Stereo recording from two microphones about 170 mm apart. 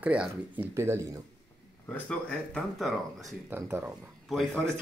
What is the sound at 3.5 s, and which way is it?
Speech, 10° right (ahead or behind).